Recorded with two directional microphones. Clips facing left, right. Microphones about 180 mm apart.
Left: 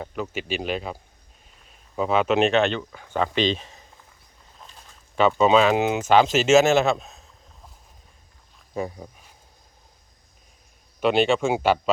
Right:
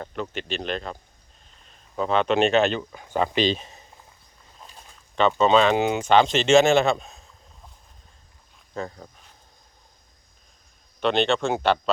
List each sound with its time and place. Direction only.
0.0 s speech: 5° left (ahead or behind)
3.2 s speech: 35° right (ahead or behind)
5.4 s speech: 5° left (ahead or behind)
8.7 s speech: 10° left (ahead or behind)
11.0 s speech: 10° left (ahead or behind)